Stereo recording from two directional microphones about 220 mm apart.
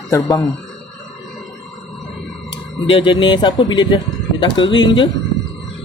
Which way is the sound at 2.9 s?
20° left (ahead or behind).